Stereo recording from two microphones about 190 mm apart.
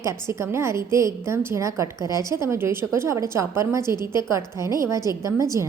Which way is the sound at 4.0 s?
25° left (ahead or behind).